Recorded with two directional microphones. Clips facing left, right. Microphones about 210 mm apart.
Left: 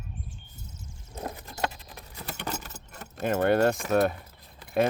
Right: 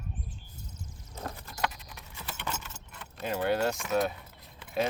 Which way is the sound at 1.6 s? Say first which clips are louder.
Left 1 dB; 30° left (ahead or behind).